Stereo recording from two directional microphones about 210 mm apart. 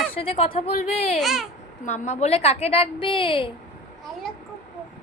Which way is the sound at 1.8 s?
35° left (ahead or behind).